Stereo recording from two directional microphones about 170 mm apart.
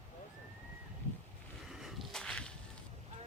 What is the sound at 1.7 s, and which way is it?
Whip, centre (ahead or behind).